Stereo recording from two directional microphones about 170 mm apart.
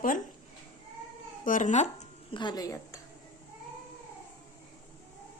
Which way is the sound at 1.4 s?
50° left (ahead or behind).